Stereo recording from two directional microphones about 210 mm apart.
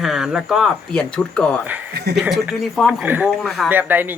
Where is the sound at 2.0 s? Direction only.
50° right (ahead or behind).